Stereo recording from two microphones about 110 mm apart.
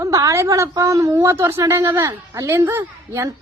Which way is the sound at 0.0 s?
30° right (ahead or behind).